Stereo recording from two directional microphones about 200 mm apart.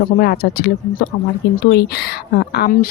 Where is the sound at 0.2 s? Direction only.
50° left (ahead or behind).